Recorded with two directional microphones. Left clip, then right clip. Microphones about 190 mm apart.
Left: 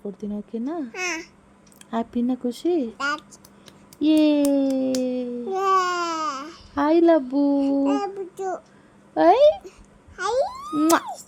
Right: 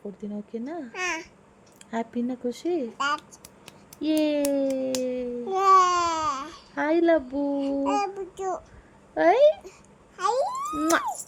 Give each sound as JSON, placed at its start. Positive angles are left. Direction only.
{"t": 0.2, "sound": "speech", "side_deg": 45}
{"t": 0.9, "sound": "a child's voice", "side_deg": 5}
{"t": 1.9, "sound": "speech", "side_deg": 45}
{"t": 4.0, "sound": "speech", "side_deg": 45}
{"t": 5.5, "sound": "speech", "side_deg": 0}
{"t": 6.7, "sound": "speech", "side_deg": 40}
{"t": 7.9, "sound": "a child's voice", "side_deg": 0}
{"t": 9.1, "sound": "a child's voice", "side_deg": 40}
{"t": 10.2, "sound": "a sound", "side_deg": 5}
{"t": 10.8, "sound": "speech", "side_deg": 45}